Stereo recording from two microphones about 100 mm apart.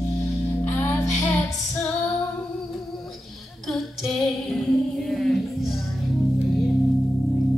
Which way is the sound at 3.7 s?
5° left (ahead or behind).